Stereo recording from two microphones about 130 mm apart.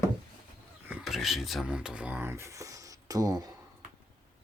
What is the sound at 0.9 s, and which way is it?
Speech, centre (ahead or behind).